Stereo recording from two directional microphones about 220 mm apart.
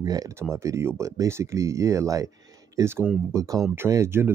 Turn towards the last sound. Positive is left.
turn(degrees=-10)  # may be behind; listen again after turning